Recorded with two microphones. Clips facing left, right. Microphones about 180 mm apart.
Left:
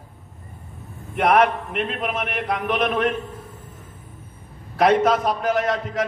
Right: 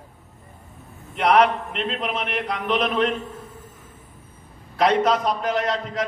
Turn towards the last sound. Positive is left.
turn(degrees=50)  # may be behind; listen again after turning